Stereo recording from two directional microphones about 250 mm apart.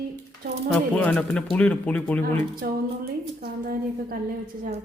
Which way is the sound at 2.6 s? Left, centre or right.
Right.